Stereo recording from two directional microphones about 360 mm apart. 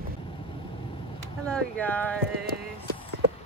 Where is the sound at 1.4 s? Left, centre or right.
Centre.